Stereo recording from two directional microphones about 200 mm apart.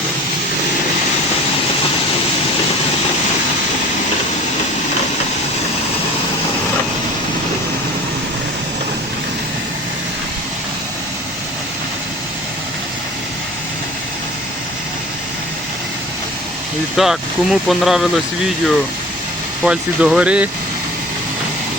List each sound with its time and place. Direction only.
17.0 s speech: centre (ahead or behind)
19.6 s speech: 5° right (ahead or behind)